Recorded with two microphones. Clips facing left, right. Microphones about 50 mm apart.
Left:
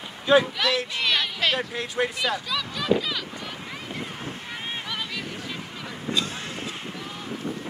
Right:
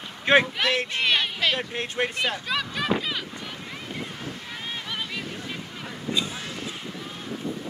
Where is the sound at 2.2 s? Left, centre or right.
Right.